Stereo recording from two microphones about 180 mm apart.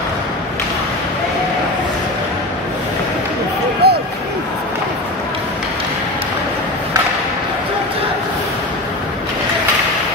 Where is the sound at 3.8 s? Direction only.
65° right (ahead or behind).